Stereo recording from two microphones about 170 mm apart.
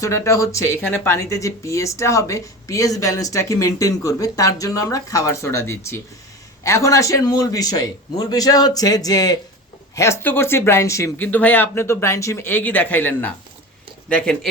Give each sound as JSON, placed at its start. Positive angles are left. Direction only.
{"t": 0.0, "sound": "speech", "side_deg": 20}